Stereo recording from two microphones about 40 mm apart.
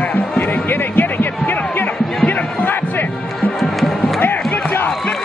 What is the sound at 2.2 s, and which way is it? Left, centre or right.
Music, left.